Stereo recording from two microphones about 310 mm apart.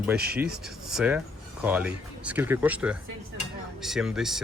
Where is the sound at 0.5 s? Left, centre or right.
Centre.